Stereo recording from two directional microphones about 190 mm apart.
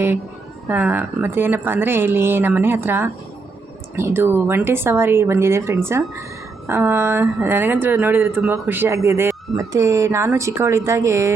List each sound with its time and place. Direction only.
0.7 s speech: 10° right (ahead or behind)